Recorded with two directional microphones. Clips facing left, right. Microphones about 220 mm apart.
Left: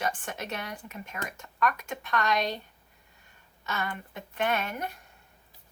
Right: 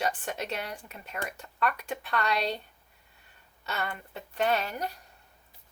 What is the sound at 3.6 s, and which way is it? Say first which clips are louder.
Speech: left 1 dB; 35° right (ahead or behind).